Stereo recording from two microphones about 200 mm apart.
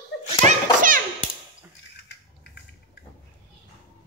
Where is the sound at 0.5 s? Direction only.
40° right (ahead or behind).